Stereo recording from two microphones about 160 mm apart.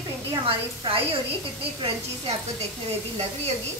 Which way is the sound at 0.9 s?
35° right (ahead or behind).